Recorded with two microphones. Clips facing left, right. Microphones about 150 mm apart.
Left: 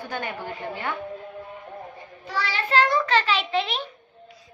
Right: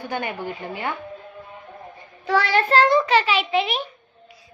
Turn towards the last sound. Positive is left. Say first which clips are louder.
# right 3 dB
turn(degrees=-10)  # may be behind; listen again after turning